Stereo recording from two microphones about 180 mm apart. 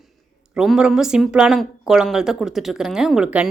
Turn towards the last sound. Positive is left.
turn(degrees=-5)  # may be behind; listen again after turning